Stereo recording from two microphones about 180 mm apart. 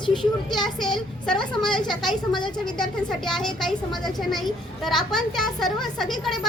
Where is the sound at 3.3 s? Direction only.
Centre (ahead or behind).